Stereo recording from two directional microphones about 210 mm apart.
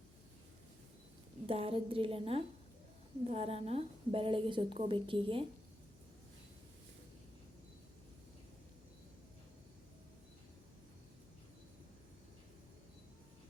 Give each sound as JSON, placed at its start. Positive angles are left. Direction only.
{"t": 1.5, "sound": "a woman's voice", "side_deg": -25}